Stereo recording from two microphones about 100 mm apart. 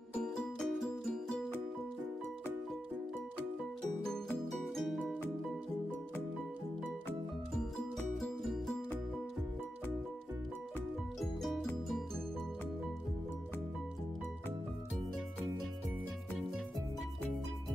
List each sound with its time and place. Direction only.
0.1 s music: 10° left (ahead or behind)
4.0 s music: 5° left (ahead or behind)
8.2 s music: centre (ahead or behind)
11.1 s music: centre (ahead or behind)